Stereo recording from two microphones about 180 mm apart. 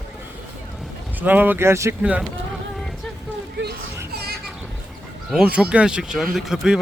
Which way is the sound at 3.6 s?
90° right.